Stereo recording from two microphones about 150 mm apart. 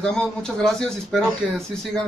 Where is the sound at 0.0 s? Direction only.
5° left (ahead or behind).